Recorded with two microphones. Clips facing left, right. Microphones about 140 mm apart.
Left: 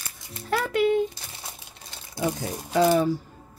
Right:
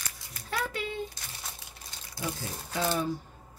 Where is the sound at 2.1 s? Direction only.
70° left (ahead or behind); by 3.1 s 90° left.